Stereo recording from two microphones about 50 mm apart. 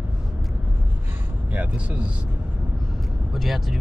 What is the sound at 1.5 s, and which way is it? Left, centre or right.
Speech, right.